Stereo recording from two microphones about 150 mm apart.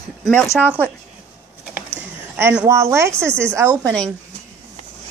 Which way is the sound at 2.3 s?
15° right (ahead or behind).